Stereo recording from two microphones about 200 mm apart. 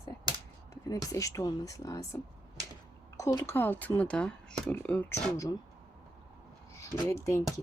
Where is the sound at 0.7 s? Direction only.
15° left (ahead or behind).